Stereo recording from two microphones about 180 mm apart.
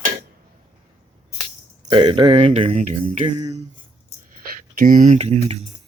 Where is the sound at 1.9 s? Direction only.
25° right (ahead or behind).